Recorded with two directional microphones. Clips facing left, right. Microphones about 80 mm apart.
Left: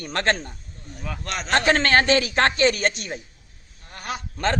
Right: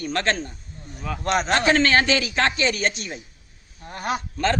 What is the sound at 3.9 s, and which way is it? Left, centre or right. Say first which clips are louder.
Speech: right 5 dB; right.